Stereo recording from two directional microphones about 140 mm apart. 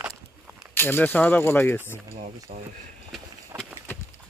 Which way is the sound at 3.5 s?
15° right (ahead or behind).